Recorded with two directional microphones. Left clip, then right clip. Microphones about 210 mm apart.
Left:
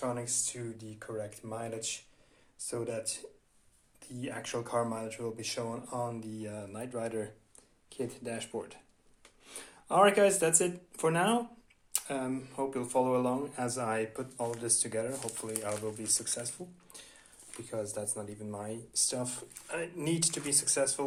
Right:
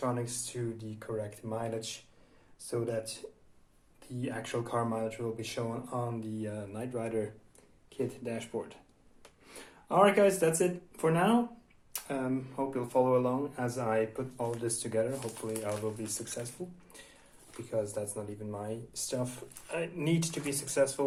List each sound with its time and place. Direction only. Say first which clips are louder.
0.0 s speech: even; 10° left (ahead or behind)
17.6 s speech: right 3 dB; 15° left (ahead or behind)